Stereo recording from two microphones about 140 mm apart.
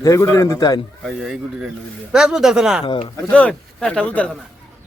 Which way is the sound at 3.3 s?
10° left (ahead or behind).